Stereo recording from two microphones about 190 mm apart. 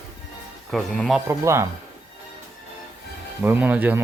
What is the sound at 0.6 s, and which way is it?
Speech, centre (ahead or behind).